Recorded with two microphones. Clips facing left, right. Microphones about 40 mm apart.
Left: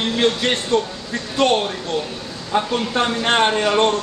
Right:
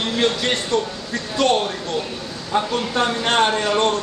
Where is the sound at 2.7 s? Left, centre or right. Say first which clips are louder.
Left 1 dB; centre.